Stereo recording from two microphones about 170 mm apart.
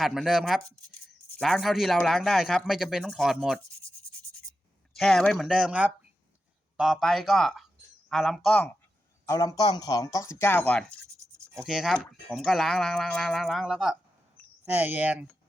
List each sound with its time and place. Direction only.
0.0 s speech: centre (ahead or behind)
4.9 s speech: 5° left (ahead or behind)
9.2 s speech: 20° left (ahead or behind); by 15.3 s 10° right (ahead or behind)